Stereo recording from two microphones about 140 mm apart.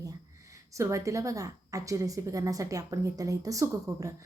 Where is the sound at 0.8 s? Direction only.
20° right (ahead or behind).